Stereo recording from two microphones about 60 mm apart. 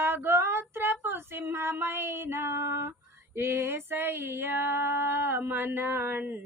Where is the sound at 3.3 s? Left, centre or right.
Right.